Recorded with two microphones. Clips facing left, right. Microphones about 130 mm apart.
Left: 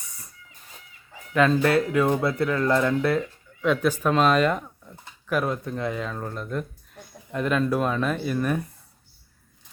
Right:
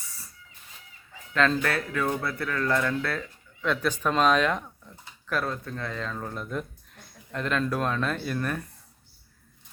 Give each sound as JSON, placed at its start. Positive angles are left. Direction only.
{"t": 0.0, "sound": "hiss", "side_deg": 20}
{"t": 1.3, "sound": "speech", "side_deg": 10}
{"t": 1.6, "sound": "speech", "side_deg": 20}
{"t": 5.3, "sound": "speech", "side_deg": 15}